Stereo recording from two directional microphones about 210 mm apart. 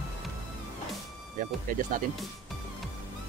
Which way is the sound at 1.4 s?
40° right (ahead or behind).